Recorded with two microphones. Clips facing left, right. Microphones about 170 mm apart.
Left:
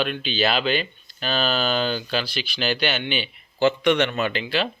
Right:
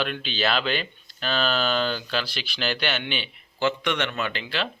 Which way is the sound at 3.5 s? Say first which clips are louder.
Left 6 dB; 30° left (ahead or behind).